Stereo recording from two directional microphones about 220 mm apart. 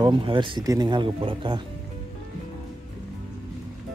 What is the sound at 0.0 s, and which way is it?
A man's voice, 20° right (ahead or behind).